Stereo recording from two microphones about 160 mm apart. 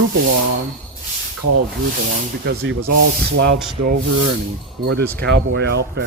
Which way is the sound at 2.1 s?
85° right.